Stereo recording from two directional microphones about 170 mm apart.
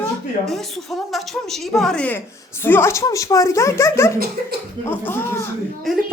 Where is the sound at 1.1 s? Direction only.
Centre (ahead or behind).